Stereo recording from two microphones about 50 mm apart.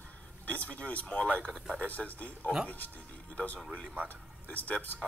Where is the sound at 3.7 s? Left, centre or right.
Left.